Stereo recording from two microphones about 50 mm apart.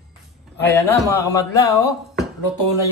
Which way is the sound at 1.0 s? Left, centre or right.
Left.